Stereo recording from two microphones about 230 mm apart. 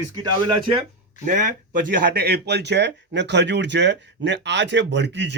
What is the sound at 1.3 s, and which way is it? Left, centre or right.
Speech, right.